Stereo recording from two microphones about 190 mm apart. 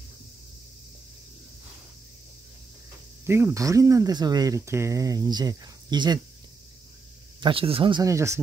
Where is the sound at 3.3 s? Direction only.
15° right (ahead or behind).